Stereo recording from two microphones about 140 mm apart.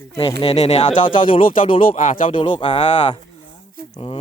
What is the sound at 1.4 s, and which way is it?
Speech, 75° left (ahead or behind).